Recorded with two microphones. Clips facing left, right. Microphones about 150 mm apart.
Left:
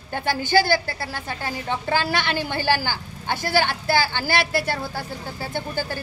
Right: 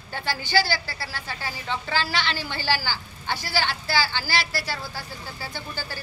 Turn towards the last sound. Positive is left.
turn(degrees=55)  # may be behind; listen again after turning